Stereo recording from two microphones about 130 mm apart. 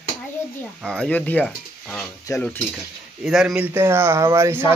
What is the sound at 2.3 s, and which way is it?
Stir, 25° left (ahead or behind).